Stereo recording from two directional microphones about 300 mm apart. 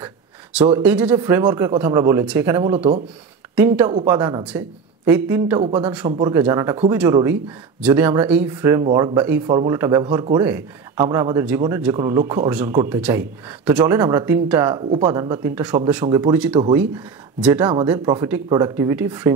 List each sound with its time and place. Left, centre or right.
0.0 s a sound: centre
0.7 s speech: centre
2.7 s speech: centre
3.5 s speech: centre